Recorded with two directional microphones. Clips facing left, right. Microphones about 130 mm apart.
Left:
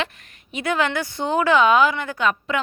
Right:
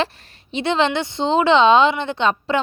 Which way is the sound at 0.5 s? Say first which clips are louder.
Right 3 dB; 25° right (ahead or behind).